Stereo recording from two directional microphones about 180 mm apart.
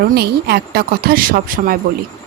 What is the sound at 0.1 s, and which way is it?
Speech, 65° right (ahead or behind).